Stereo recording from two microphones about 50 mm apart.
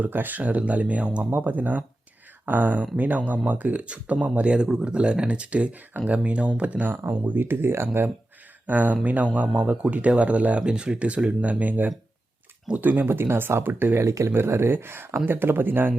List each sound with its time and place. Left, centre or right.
0.0 s speech: right
1.3 s speech: right
6.8 s speech: right
8.6 s speech: right
10.6 s speech: centre
11.6 s speech: right
13.1 s speech: right
14.0 s speech: right
14.3 s speech: right